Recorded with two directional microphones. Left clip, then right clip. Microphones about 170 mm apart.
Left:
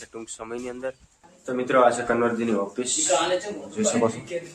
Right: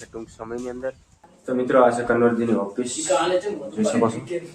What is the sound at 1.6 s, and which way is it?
Speech, 5° left (ahead or behind).